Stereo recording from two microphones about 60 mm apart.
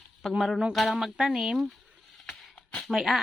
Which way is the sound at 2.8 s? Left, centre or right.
Centre.